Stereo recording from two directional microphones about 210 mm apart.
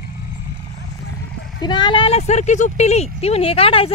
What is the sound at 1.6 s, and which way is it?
Speech, 20° left (ahead or behind).